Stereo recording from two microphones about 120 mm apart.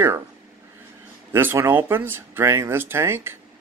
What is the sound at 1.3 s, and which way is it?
Speech, 20° right (ahead or behind).